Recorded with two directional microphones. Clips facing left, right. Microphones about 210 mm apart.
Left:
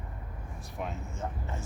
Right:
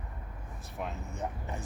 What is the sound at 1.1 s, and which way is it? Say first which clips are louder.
Speech: even; 15° right (ahead or behind).